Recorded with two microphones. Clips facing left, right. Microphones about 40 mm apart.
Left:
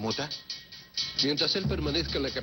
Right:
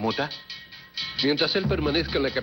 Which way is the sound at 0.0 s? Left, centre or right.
Right.